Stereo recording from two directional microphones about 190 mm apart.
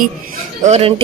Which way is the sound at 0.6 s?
35° right (ahead or behind).